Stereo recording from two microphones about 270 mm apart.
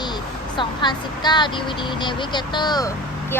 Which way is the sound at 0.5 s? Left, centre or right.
Centre.